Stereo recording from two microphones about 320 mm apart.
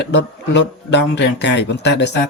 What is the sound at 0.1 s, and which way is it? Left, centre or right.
Speech, left.